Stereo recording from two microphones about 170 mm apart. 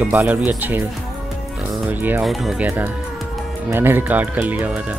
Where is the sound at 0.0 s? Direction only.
10° right (ahead or behind).